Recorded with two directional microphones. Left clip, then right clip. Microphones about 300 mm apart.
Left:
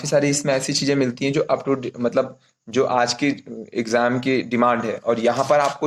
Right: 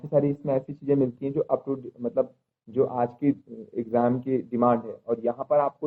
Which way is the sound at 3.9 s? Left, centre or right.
Left.